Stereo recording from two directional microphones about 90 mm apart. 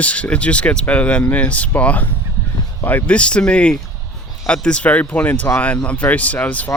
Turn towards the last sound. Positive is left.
turn(degrees=20)  # may be behind; listen again after turning